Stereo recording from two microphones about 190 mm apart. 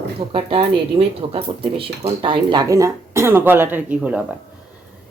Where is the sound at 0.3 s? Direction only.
30° right (ahead or behind); by 4.2 s 10° right (ahead or behind).